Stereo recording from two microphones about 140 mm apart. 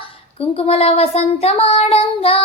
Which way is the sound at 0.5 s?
45° left (ahead or behind).